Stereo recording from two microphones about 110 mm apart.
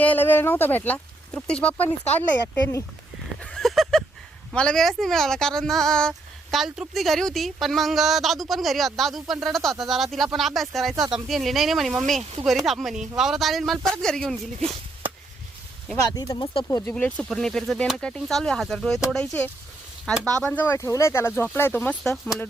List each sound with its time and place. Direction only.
0.0 s speech: 15° left (ahead or behind)
3.4 s a sound: 5° left (ahead or behind)
4.5 s speech: 5° left (ahead or behind)
16.0 s speech: 35° left (ahead or behind)
16.9 s speech: 10° left (ahead or behind)
20.7 s speech: 25° left (ahead or behind)
22.0 s speech: 5° left (ahead or behind)